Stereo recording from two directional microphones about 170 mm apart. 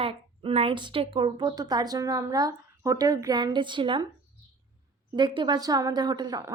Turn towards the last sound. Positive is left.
turn(degrees=-20)  # may be behind; listen again after turning